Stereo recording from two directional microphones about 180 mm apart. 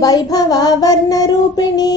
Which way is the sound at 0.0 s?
20° left (ahead or behind).